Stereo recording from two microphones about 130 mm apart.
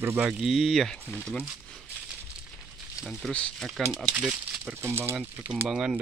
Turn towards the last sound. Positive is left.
turn(degrees=-5)  # may be behind; listen again after turning